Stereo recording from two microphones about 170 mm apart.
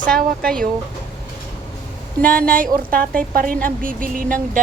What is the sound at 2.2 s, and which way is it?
Speech, 55° right (ahead or behind).